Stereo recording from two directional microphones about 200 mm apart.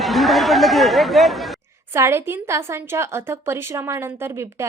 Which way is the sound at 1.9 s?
15° right (ahead or behind).